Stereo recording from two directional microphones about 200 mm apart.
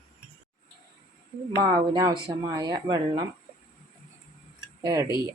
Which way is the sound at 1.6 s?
20° right (ahead or behind).